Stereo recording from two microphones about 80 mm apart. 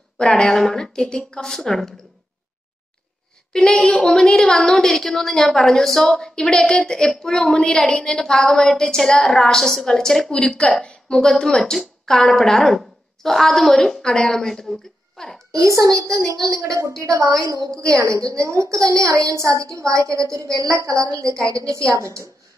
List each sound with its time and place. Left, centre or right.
0.2 s a woman's voice: centre
3.5 s a woman's voice: centre
15.5 s a woman's voice: right